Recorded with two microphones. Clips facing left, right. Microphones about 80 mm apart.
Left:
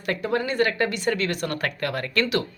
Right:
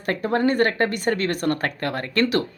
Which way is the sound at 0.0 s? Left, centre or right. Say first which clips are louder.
Right 4 dB; right.